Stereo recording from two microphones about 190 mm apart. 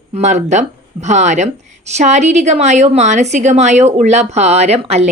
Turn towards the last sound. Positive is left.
turn(degrees=-35)  # may be behind; listen again after turning